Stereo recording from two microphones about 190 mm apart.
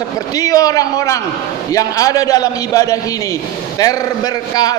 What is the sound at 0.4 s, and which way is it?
A man's voice, 20° left (ahead or behind).